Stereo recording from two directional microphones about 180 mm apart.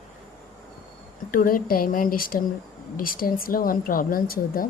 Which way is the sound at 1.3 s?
50° left (ahead or behind).